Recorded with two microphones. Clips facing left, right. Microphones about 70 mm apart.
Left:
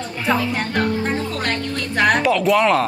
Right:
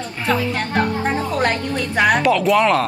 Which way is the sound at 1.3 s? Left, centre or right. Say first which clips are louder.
Right 4 dB; centre.